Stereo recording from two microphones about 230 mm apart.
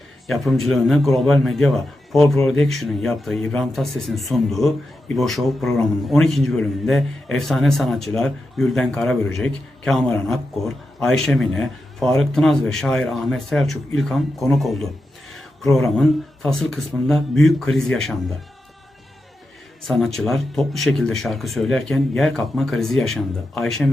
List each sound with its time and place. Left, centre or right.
0.3 s a man's voice: centre
20.1 s a man's voice: centre